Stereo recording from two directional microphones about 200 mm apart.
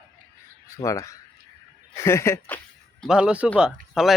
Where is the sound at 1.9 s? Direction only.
15° left (ahead or behind).